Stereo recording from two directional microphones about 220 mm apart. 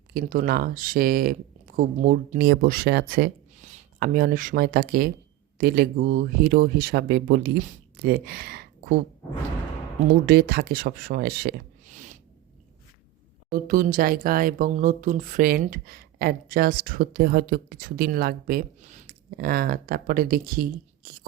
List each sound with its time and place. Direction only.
0.1 s speech: 40° right (ahead or behind)
3.5 s speech: 30° right (ahead or behind)
10.2 s speech: 45° right (ahead or behind)
13.5 s speech: 40° right (ahead or behind)